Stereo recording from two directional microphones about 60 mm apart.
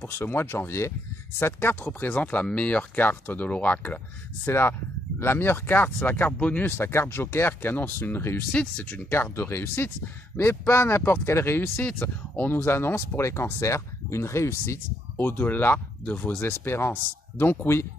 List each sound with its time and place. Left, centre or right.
0.0 s speech: left
4.5 s speech: left
6.7 s speech: left
11.8 s speech: left
12.6 s speech: left
15.1 s speech: left
16.6 s speech: left